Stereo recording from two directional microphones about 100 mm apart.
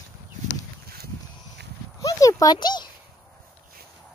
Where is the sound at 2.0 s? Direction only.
35° left (ahead or behind).